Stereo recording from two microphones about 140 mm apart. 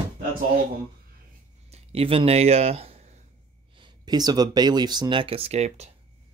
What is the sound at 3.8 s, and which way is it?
Speech, 30° right (ahead or behind).